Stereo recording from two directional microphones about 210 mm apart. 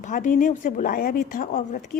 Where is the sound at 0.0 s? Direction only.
40° left (ahead or behind).